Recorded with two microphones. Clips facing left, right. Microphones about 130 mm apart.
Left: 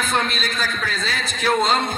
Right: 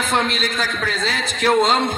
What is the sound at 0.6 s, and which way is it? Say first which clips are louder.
Speech: right 3 dB; 90° right.